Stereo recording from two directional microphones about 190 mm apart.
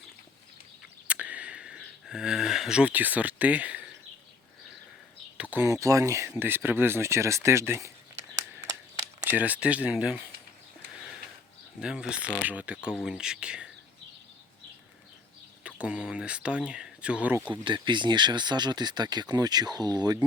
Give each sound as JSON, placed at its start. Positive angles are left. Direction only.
{"t": 1.0, "sound": "a sound", "side_deg": -5}
{"t": 5.4, "sound": "speech", "side_deg": -10}
{"t": 8.4, "sound": "a sound", "side_deg": -15}
{"t": 11.8, "sound": "speech", "side_deg": -5}
{"t": 15.6, "sound": "speech", "side_deg": -5}
{"t": 17.5, "sound": "speech", "side_deg": -25}